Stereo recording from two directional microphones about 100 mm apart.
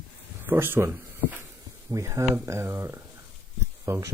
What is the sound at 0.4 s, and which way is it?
Speech, 20° right (ahead or behind).